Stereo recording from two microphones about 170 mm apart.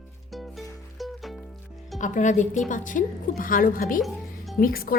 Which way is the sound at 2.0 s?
45° left (ahead or behind).